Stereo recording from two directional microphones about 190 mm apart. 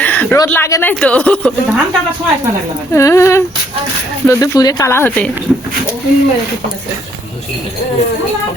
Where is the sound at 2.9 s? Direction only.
15° left (ahead or behind).